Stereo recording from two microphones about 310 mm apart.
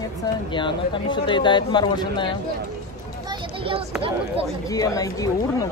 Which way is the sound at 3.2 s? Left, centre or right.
Centre.